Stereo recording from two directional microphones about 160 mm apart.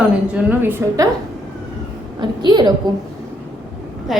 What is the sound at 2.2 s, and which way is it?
Speech, 25° right (ahead or behind).